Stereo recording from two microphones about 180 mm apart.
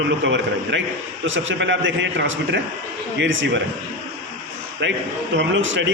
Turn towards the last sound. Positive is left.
turn(degrees=-90)